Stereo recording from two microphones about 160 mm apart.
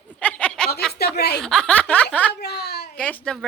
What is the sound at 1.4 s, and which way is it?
Speech, 5° left (ahead or behind).